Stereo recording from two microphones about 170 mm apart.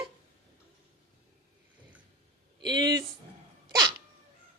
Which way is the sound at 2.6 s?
25° right (ahead or behind).